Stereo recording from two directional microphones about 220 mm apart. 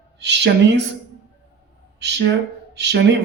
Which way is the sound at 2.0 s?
50° right (ahead or behind).